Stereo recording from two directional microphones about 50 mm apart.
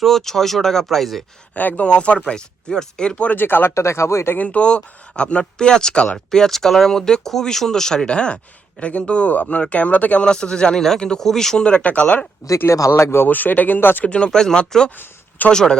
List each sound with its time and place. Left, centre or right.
0.0 s speech: centre
1.5 s speech: left
3.3 s speech: left
3.8 s speech: left
4.4 s speech: left
10.2 s speech: centre
12.6 s speech: left
12.9 s speech: left
13.2 s speech: left
14.0 s speech: left
14.3 s speech: centre
14.8 s speech: left
15.5 s speech: centre